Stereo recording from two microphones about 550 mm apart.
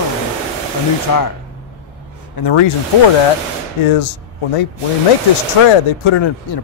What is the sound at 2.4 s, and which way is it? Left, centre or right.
Speech, left.